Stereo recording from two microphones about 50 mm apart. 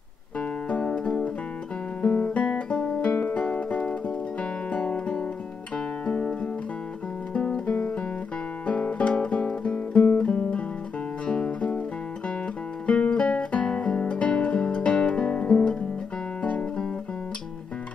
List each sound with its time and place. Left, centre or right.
0.4 s music: left
2.0 s guitar: left
3.3 s music: left
4.4 s guitar: left
6.0 s music: centre
8.6 s guitar: left
11.2 s music: left
12.8 s music: left
16.4 s guitar: left